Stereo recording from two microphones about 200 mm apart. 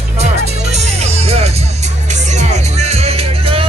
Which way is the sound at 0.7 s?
35° right (ahead or behind).